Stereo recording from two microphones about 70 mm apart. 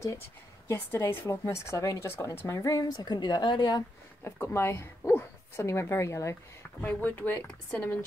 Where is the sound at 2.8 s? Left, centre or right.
Left.